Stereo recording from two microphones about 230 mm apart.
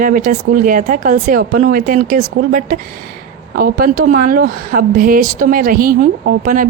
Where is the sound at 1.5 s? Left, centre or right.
Right.